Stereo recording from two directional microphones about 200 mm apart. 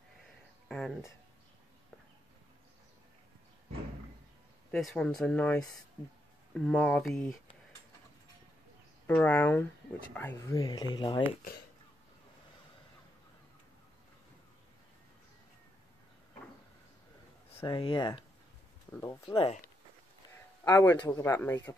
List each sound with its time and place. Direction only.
0.7 s speech: 5° left (ahead or behind)
4.6 s speech: 5° left (ahead or behind)
9.0 s speech: 5° left (ahead or behind)
10.6 s speech: 20° left (ahead or behind)
17.6 s speech: 25° left (ahead or behind)
18.9 s speech: 15° left (ahead or behind)
19.2 s speech: 30° left (ahead or behind)
20.3 s speech: 15° left (ahead or behind)